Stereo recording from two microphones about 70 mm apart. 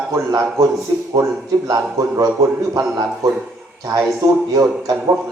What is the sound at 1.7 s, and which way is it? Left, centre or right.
Speech, right.